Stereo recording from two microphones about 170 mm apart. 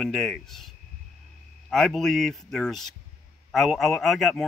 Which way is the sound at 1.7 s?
Centre (ahead or behind).